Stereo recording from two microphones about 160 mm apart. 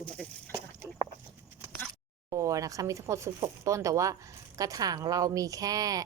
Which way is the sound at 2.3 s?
20° right (ahead or behind).